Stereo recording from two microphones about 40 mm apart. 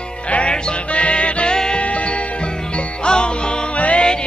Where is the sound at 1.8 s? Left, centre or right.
Left.